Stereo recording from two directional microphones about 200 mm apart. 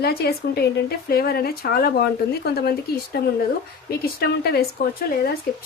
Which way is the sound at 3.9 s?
50° left (ahead or behind).